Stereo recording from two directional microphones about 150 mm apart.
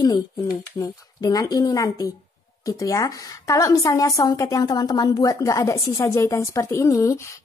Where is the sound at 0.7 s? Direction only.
20° left (ahead or behind).